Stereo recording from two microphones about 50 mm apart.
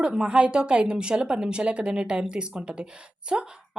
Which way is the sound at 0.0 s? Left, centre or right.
Centre.